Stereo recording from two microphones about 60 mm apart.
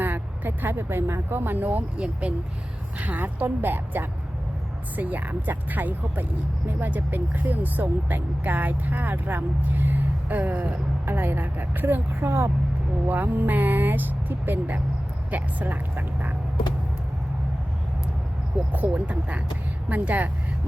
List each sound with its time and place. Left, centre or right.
0.0 s speech: right
3.0 s speech: right
18.7 s speech: right